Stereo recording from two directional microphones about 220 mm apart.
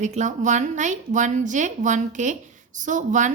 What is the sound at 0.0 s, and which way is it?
A woman's voice, 35° right (ahead or behind).